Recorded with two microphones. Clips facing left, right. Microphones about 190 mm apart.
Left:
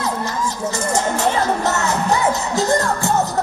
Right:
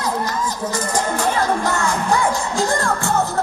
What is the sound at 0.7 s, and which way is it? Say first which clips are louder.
Music: left 2 dB; 25° left (ahead or behind).